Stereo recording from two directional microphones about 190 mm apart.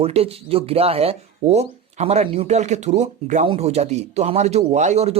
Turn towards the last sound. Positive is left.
turn(degrees=-35)  # may be behind; listen again after turning